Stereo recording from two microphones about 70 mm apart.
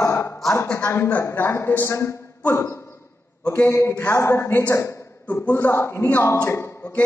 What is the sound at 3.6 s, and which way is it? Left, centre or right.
A woman's voice, left.